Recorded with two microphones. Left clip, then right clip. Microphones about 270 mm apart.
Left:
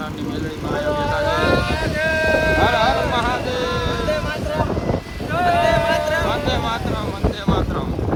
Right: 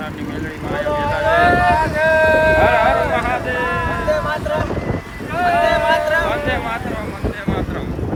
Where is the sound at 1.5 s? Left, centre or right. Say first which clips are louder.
Right 6 dB; centre.